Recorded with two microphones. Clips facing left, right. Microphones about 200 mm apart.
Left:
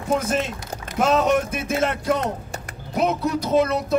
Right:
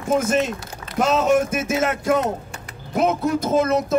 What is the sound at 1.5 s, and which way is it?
Speech, 45° right (ahead or behind).